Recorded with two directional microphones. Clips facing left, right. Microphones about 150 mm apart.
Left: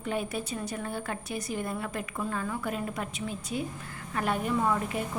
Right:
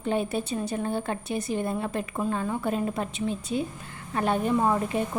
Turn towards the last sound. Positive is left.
turn(degrees=-30)  # may be behind; listen again after turning